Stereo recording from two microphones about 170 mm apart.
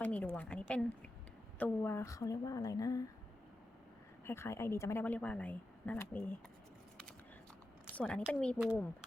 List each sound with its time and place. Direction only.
0.0 s a sound: 10° left (ahead or behind)
1.5 s a woman's voice: 10° left (ahead or behind)
4.3 s speech: 15° left (ahead or behind)
7.9 s speech: 5° left (ahead or behind)